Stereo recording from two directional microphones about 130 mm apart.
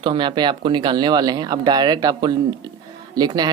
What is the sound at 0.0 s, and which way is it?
Speech, 35° right (ahead or behind).